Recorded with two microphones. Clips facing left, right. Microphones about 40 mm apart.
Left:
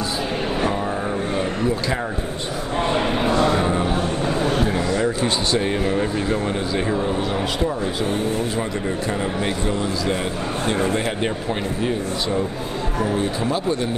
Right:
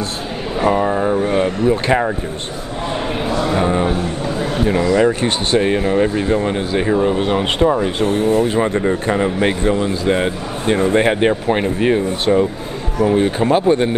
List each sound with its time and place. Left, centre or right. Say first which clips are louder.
0.6 s vehicle: right 12 dB; right
3.5 s a sound: right 4 dB; centre
4.6 s a man's voice: right 7 dB; right
5.7 s speech: right 6 dB; right
7.2 s a man's voice: right 6 dB; right